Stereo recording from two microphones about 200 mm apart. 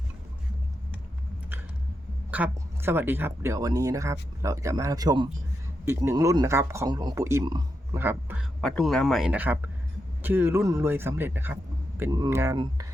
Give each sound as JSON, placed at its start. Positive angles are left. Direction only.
{"t": 2.3, "sound": "speech", "side_deg": -10}
{"t": 8.6, "sound": "speech", "side_deg": 0}